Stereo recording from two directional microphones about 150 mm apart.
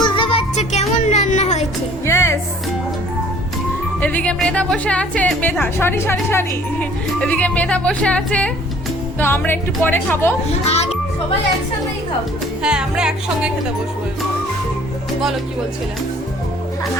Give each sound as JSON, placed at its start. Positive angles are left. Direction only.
{"t": 0.0, "sound": "music", "side_deg": 35}
{"t": 2.0, "sound": "music", "side_deg": 15}
{"t": 4.0, "sound": "speech", "side_deg": 10}
{"t": 12.6, "sound": "music", "side_deg": -5}